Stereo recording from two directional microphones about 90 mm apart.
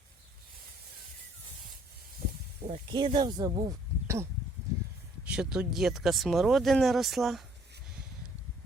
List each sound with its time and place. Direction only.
2.6 s speech: 90° right; by 3.8 s 45° right (ahead or behind)
4.0 s a sound: 30° right (ahead or behind)
5.2 s speech: 10° right (ahead or behind)